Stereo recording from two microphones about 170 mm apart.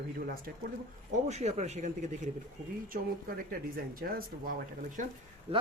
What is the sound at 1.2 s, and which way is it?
Speech, 40° right (ahead or behind).